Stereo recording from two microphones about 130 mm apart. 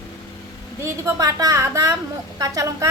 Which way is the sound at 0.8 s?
25° right (ahead or behind).